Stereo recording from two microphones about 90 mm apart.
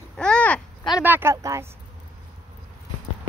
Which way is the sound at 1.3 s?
35° right (ahead or behind).